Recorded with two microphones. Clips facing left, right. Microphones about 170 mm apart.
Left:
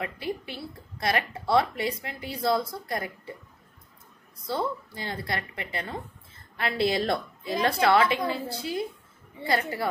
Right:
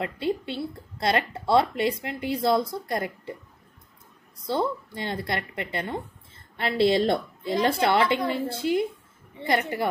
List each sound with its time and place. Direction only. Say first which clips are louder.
0.0 s a woman's voice: right 5 dB; 25° right (ahead or behind)
4.5 s a woman's voice: right 3 dB; 25° right (ahead or behind)